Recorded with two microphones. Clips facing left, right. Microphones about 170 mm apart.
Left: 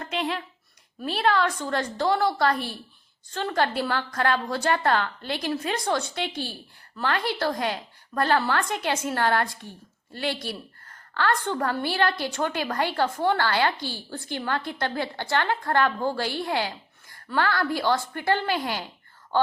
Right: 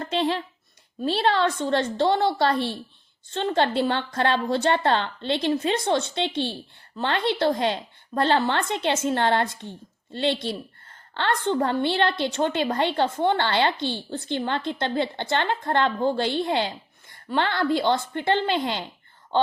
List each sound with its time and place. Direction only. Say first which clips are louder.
0.0 s a woman's voice: right 4 dB; 30° right (ahead or behind)